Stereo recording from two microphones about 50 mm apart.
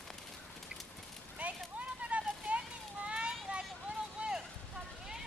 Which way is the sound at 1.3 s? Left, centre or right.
Right.